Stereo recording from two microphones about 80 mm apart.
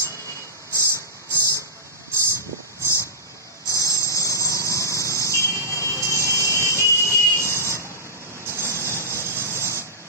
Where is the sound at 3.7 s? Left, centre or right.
Left.